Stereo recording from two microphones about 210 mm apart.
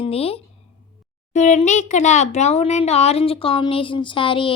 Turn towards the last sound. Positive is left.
turn(degrees=25)  # may be behind; listen again after turning